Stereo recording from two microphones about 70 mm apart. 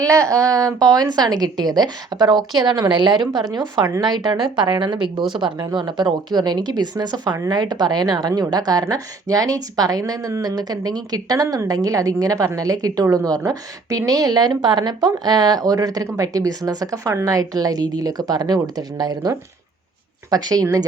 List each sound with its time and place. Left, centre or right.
0.0 s a woman's voice: right
8.4 s a woman's voice: right
8.9 s a woman's voice: right
11.4 s a woman's voice: right
11.7 s a woman's voice: right
20.3 s a woman's voice: right